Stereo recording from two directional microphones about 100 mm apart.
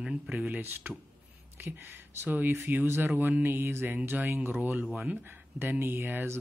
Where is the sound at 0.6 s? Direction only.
20° right (ahead or behind).